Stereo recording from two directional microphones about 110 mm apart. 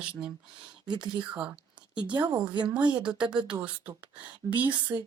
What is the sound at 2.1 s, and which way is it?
Speech, 45° right (ahead or behind).